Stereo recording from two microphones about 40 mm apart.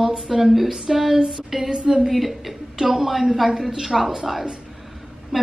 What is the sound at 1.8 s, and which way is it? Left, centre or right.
Speech, right.